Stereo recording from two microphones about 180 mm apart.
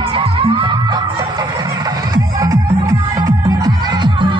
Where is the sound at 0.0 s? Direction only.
30° right (ahead or behind).